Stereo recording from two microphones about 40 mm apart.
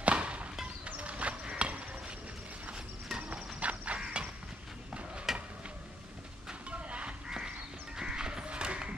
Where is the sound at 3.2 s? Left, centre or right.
Right.